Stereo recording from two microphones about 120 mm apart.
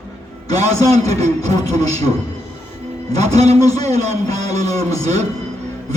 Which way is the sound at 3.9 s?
30° left (ahead or behind).